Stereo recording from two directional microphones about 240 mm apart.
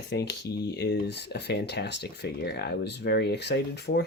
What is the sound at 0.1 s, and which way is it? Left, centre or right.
Speech, left.